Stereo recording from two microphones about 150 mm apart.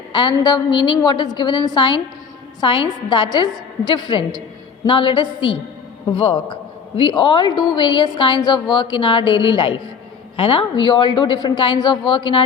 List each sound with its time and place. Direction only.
0.1 s a woman's voice: 30° left (ahead or behind)